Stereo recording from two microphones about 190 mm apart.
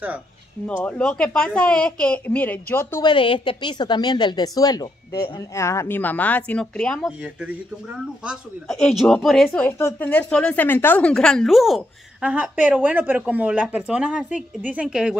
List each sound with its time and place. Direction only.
0.8 s speech: 5° left (ahead or behind)
3.0 s a woman's voice: 25° left (ahead or behind); by 9.7 s centre (ahead or behind)
9.7 s speech: 10° left (ahead or behind); by 15.1 s 5° right (ahead or behind)